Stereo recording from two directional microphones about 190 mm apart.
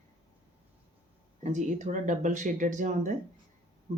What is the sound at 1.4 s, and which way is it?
Speech, 40° right (ahead or behind).